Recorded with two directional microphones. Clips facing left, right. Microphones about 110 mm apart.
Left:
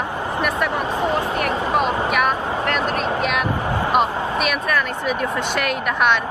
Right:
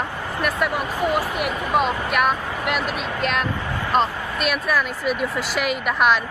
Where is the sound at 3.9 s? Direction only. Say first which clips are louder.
Even; 5° left (ahead or behind).